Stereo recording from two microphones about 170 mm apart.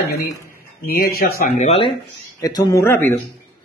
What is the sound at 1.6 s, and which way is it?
Speech, 35° left (ahead or behind).